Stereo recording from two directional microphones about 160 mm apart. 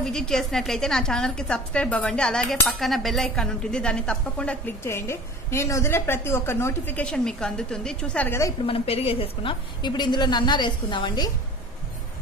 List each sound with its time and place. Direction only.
0.0 s a woman's voice: 5° left (ahead or behind)
8.6 s a woman's voice: 35° left (ahead or behind)